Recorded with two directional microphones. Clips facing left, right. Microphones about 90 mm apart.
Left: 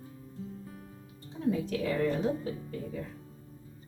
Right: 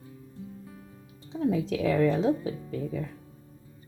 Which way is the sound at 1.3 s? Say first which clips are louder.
Right 4 dB; 90° right.